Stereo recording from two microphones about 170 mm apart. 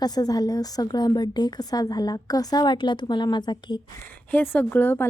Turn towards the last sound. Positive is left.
turn(degrees=10)  # may be behind; listen again after turning